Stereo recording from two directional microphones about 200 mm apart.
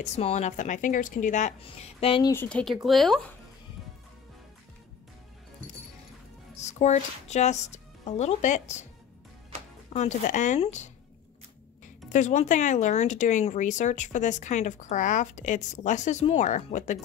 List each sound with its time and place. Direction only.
0.0 s speech: 35° left (ahead or behind)
2.3 s speech: 5° left (ahead or behind)
6.5 s speech: 35° left (ahead or behind)
9.9 s speech: 40° left (ahead or behind)
12.1 s speech: 35° left (ahead or behind)